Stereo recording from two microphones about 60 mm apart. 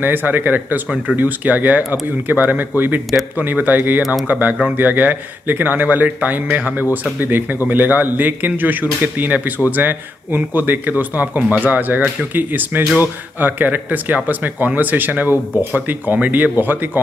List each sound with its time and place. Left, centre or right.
0.0 s speech: right